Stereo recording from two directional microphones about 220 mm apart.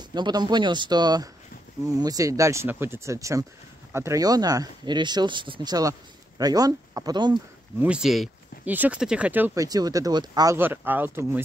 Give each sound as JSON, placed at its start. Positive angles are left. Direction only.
{"t": 0.1, "sound": "speech", "side_deg": -20}
{"t": 7.8, "sound": "speech", "side_deg": -5}